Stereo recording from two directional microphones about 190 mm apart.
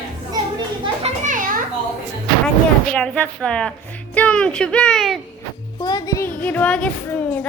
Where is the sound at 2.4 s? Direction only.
5° left (ahead or behind).